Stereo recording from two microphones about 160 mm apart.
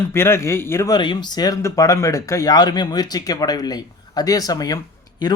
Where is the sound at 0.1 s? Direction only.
15° left (ahead or behind).